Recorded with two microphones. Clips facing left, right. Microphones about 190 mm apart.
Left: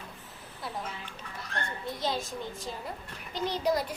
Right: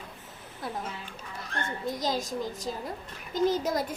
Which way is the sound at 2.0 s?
40° right (ahead or behind).